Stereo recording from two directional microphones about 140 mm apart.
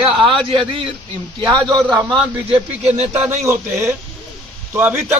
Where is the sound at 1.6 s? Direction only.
5° left (ahead or behind).